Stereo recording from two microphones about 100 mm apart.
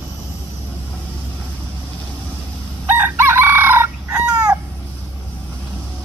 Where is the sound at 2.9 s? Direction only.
20° right (ahead or behind).